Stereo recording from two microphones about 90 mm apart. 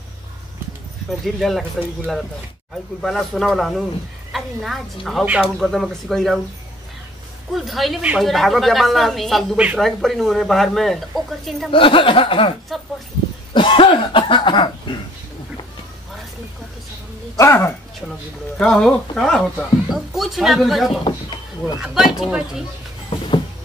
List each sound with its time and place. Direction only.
1.2 s speech: 5° left (ahead or behind)
3.0 s speech: 5° left (ahead or behind)
7.5 s speech: centre (ahead or behind)
11.7 s a sound: 75° left (ahead or behind)
17.4 s speech: 30° left (ahead or behind)
18.6 s speech: 10° left (ahead or behind)
21.0 s a sound: 60° left (ahead or behind)
21.7 s speech: 5° right (ahead or behind)
23.0 s a sound: 75° left (ahead or behind)